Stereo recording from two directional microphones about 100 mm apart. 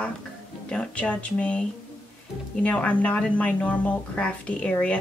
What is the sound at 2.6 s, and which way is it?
A woman's voice, 15° left (ahead or behind).